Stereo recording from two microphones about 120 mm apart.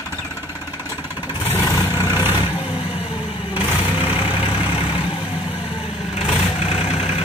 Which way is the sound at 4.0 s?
45° left (ahead or behind).